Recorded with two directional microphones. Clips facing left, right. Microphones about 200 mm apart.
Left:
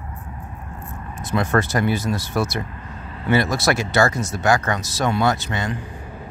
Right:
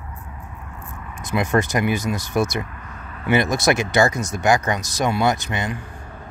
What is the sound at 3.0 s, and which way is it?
Vehicle, 30° left (ahead or behind).